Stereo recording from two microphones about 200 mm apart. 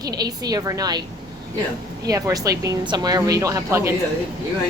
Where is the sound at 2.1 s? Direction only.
15° right (ahead or behind).